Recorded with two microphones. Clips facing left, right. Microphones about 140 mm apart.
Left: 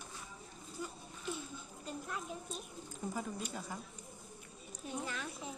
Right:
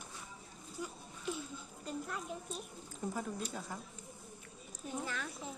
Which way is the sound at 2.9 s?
Centre (ahead or behind).